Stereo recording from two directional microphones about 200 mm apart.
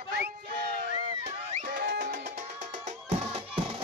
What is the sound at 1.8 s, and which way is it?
Music, 55° right (ahead or behind).